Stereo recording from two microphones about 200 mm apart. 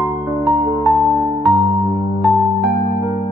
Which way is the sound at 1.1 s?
Centre (ahead or behind).